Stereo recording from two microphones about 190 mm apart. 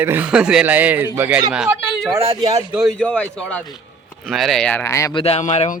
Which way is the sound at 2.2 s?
25° right (ahead or behind).